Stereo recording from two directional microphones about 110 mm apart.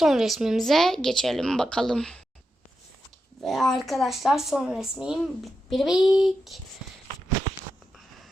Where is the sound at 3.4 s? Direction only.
Centre (ahead or behind).